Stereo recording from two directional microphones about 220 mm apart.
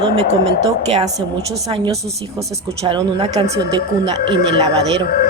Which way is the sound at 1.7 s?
20° right (ahead or behind).